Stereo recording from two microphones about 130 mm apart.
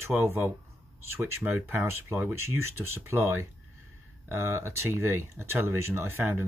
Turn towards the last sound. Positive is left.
turn(degrees=-20)  # may be behind; listen again after turning